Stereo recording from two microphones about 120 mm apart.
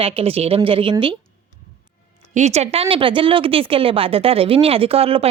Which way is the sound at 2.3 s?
70° right (ahead or behind).